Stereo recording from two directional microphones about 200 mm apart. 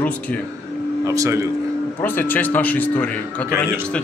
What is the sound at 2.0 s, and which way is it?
A man's voice, 10° left (ahead or behind).